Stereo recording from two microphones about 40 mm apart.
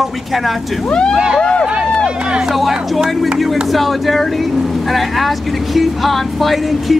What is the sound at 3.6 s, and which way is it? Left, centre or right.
Speech, centre.